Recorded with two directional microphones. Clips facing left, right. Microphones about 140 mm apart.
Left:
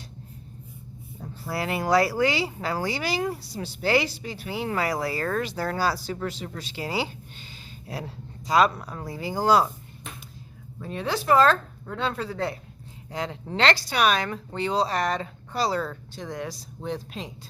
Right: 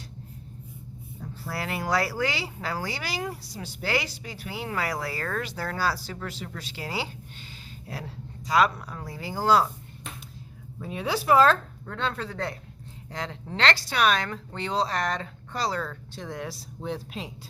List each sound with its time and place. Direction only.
1.5 s speech: 20° left (ahead or behind)
8.4 s speech: 25° left (ahead or behind)
10.8 s speech: 5° right (ahead or behind)
11.9 s speech: 10° left (ahead or behind)
16.1 s speech: centre (ahead or behind)